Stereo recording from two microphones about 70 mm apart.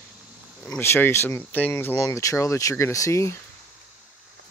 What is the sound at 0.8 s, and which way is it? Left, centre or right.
Speech, left.